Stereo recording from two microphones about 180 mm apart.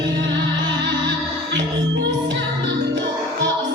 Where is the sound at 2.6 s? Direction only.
85° right.